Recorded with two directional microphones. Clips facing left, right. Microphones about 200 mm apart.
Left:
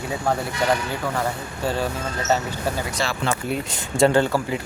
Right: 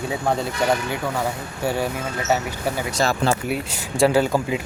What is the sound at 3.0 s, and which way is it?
Speech, 45° right (ahead or behind).